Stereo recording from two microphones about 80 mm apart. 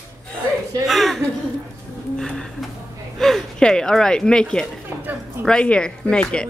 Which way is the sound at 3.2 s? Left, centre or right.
Centre.